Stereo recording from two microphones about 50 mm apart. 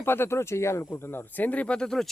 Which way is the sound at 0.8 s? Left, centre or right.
Left.